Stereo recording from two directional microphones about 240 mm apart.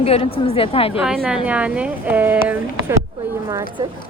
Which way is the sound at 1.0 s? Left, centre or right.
Centre.